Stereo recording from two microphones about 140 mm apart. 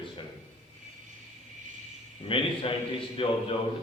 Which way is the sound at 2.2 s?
40° left (ahead or behind).